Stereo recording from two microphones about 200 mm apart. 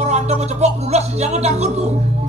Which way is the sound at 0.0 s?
35° right (ahead or behind).